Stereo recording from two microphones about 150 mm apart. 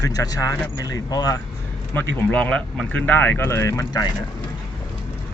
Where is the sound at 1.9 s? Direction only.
15° left (ahead or behind).